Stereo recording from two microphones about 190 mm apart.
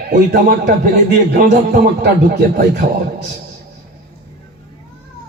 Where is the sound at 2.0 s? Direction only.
60° right (ahead or behind).